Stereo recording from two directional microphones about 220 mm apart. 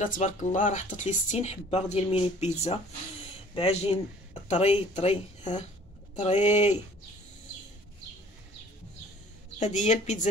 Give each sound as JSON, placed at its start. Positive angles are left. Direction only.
{"t": 0.0, "sound": "speech", "side_deg": 35}
{"t": 9.6, "sound": "speech", "side_deg": 30}